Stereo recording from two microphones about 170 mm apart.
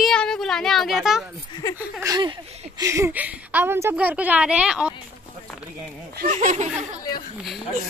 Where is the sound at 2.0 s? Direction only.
25° right (ahead or behind).